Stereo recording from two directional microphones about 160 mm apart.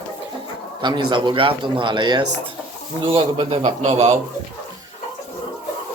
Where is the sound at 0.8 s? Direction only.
30° right (ahead or behind).